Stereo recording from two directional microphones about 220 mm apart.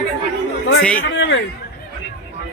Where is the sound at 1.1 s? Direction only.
55° left (ahead or behind).